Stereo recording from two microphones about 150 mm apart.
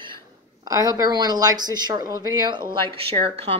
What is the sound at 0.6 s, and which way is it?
A woman's voice, 25° right (ahead or behind).